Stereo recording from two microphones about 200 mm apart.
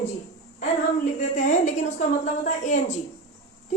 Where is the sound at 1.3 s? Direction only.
35° left (ahead or behind).